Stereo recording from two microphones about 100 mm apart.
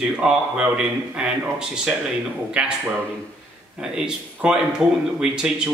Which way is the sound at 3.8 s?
5° right (ahead or behind).